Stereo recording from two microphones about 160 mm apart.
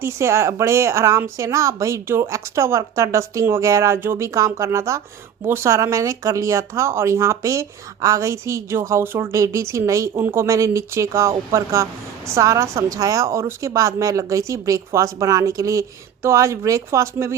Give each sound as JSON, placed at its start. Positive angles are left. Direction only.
{"t": 0.0, "sound": "speech", "side_deg": -15}